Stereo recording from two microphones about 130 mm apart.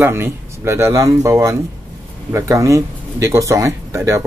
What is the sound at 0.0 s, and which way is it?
Speech, 20° right (ahead or behind).